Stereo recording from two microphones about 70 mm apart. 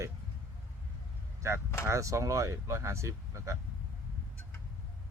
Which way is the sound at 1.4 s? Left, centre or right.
Right.